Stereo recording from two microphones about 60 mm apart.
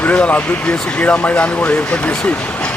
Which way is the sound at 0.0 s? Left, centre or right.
Left.